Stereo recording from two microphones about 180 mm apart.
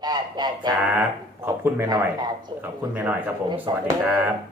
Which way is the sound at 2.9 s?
10° right (ahead or behind).